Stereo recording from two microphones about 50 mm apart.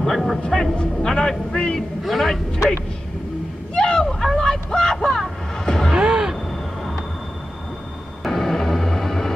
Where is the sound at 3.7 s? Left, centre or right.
Centre.